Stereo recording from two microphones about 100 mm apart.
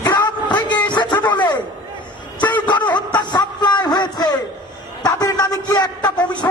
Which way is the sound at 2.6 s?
50° left (ahead or behind).